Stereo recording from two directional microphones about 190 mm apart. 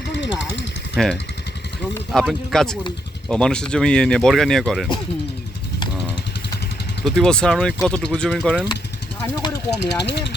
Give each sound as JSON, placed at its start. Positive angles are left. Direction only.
{"t": 0.1, "sound": "a sound", "side_deg": 70}
{"t": 0.9, "sound": "speech", "side_deg": 0}
{"t": 7.0, "sound": "speech", "side_deg": 5}
{"t": 9.7, "sound": "speech", "side_deg": 65}